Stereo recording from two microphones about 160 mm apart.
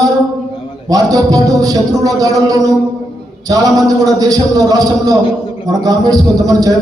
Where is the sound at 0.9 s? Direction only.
25° right (ahead or behind).